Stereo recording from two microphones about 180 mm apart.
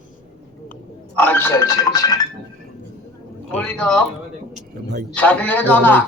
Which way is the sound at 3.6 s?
5° left (ahead or behind).